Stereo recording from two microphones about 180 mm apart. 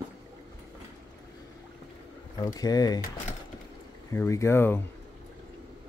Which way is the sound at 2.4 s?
20° left (ahead or behind).